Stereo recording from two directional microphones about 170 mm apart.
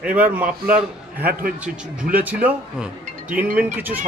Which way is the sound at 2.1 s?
10° right (ahead or behind).